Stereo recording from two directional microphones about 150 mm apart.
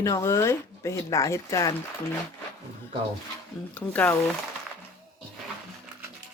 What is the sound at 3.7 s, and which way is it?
Speech, 10° left (ahead or behind).